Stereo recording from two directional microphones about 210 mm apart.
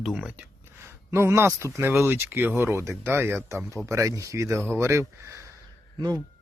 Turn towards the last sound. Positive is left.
turn(degrees=-20)  # may be behind; listen again after turning